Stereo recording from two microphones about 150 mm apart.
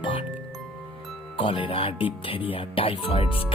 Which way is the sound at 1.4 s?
35° left (ahead or behind).